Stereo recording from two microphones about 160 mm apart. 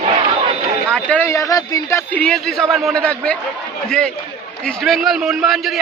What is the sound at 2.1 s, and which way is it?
A man's voice, 5° left (ahead or behind).